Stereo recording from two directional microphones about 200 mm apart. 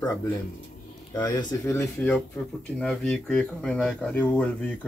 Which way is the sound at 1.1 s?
20° left (ahead or behind).